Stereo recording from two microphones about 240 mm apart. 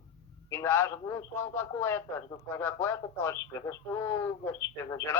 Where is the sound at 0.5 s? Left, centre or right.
Centre.